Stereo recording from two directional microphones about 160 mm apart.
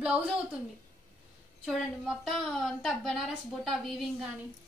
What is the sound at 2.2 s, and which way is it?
A woman's voice, centre (ahead or behind).